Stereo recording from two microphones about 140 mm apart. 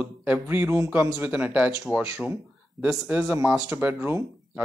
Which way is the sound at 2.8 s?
25° right (ahead or behind).